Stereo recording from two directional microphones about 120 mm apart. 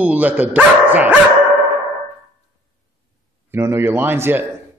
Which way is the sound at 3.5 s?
20° right (ahead or behind).